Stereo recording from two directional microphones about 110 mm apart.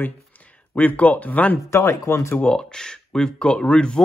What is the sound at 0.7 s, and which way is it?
Speech, 15° left (ahead or behind).